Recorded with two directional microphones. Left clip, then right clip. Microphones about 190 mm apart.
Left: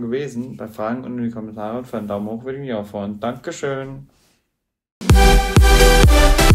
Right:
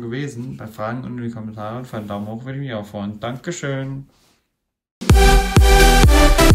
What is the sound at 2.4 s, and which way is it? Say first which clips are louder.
Speech: left 3 dB; 45° right (ahead or behind).